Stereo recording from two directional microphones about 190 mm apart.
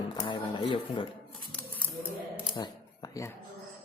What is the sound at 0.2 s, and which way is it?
Cash register, 25° left (ahead or behind).